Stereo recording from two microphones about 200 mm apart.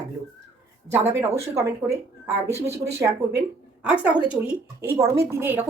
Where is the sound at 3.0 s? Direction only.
15° right (ahead or behind).